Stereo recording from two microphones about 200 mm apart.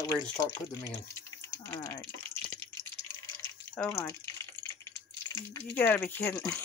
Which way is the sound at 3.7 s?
10° left (ahead or behind).